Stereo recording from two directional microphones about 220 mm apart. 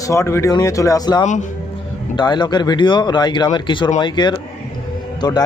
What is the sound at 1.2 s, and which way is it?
Speech, 35° left (ahead or behind).